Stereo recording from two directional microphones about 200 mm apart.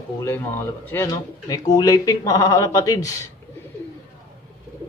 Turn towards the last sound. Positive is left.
turn(degrees=15)  # may be behind; listen again after turning